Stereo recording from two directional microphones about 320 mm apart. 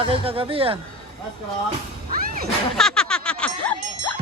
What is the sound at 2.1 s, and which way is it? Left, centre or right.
Music, right.